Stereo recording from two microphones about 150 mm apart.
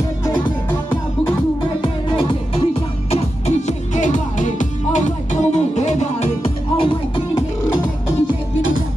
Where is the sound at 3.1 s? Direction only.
50° left (ahead or behind).